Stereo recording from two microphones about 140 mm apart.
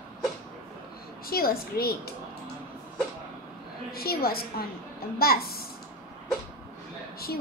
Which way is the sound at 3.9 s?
90° left.